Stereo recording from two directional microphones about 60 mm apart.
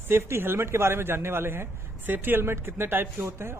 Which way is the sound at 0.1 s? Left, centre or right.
Right.